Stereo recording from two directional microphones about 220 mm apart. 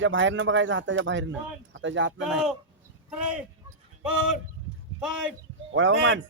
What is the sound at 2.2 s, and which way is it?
Speech, 5° right (ahead or behind).